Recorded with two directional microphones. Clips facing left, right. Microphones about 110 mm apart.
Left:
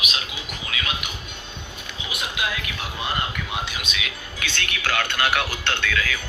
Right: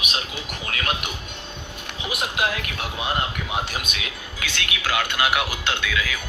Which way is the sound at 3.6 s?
45° right (ahead or behind).